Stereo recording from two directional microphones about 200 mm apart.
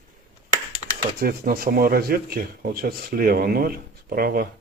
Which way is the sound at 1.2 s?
50° right (ahead or behind).